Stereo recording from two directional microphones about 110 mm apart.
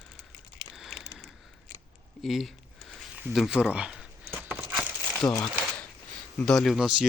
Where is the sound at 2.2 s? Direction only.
Centre (ahead or behind).